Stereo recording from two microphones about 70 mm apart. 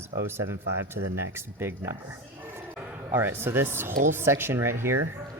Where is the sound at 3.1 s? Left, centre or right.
Right.